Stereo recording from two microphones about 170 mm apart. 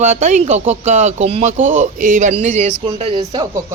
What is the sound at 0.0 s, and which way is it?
Speech, 45° right (ahead or behind).